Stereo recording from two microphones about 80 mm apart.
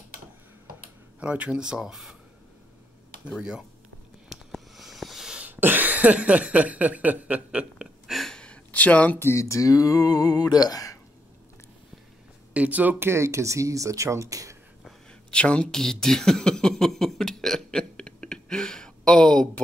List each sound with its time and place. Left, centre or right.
1.2 s speech: centre
3.3 s speech: centre
4.3 s a sound: centre
5.4 s speech: right
8.1 s gasp: centre
9.2 s a sound: left
12.5 s speech: centre
13.1 s speech: right
15.3 s a sound: centre